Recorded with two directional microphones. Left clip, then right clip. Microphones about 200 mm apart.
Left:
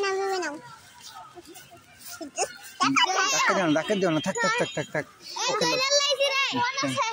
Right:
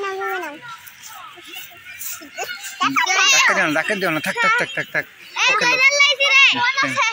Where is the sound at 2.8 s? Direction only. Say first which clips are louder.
Right 6 dB; 45° left (ahead or behind).